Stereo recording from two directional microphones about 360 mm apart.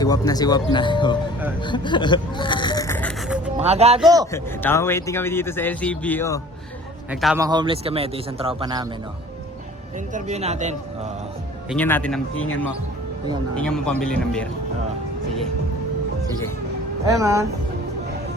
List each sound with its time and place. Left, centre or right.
0.0 s a man's voice: centre
1.6 s a sound: centre
3.6 s a man's voice: centre
4.3 s a man's voice: centre
10.1 s speech: centre
11.7 s speech: centre
13.6 s speech: centre
17.1 s a man's voice: centre